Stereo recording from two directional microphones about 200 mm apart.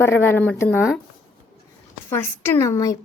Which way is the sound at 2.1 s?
10° left (ahead or behind).